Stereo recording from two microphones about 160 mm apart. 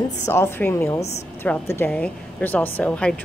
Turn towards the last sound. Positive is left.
turn(degrees=10)  # may be behind; listen again after turning